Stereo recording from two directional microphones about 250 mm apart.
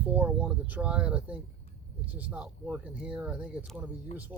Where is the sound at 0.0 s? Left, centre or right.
Centre.